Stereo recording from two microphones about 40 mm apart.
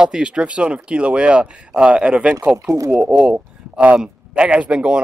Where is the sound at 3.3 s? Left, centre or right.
Right.